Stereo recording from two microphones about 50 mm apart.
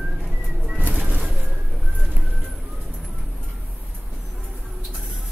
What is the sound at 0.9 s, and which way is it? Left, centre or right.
Bird, right.